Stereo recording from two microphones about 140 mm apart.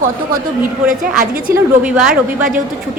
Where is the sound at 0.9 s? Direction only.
90° right.